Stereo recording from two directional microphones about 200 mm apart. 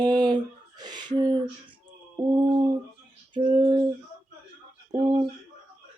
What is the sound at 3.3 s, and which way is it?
Female singing, 25° right (ahead or behind).